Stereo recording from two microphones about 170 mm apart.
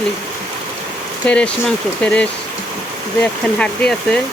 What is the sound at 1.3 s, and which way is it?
Speech, 5° left (ahead or behind).